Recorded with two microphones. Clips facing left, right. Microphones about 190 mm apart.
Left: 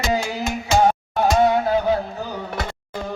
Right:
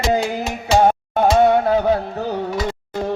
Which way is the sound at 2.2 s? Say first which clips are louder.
Right 6 dB; 65° right (ahead or behind).